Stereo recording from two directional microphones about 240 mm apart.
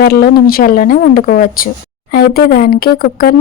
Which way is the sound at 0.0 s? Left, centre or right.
Left.